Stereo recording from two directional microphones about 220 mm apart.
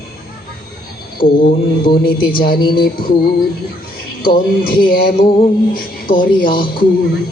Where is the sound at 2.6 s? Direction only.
20° left (ahead or behind).